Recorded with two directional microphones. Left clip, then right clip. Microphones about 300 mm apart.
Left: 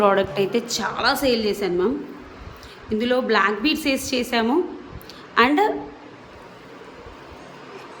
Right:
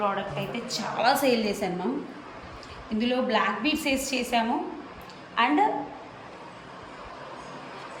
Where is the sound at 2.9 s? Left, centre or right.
Centre.